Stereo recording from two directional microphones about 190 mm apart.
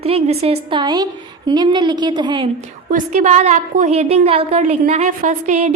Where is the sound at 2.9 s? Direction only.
40° right (ahead or behind).